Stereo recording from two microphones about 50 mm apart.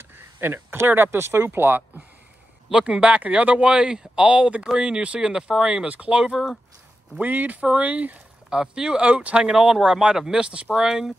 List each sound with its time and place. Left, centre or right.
0.4 s speech: right
2.7 s speech: right
5.9 s speech: right
7.2 s speech: right
8.5 s speech: centre